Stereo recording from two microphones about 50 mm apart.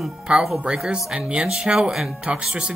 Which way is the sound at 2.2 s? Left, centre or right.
Centre.